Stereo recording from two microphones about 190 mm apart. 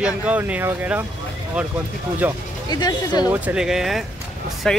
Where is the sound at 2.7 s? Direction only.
20° left (ahead or behind).